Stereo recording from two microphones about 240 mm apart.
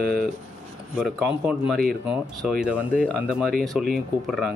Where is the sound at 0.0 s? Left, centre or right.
Centre.